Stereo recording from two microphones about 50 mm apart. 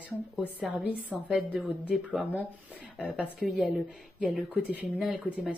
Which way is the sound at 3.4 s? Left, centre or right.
Centre.